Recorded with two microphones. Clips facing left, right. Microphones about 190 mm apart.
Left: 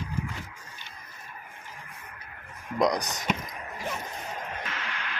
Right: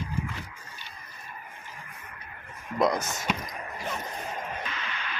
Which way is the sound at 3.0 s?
15° left (ahead or behind).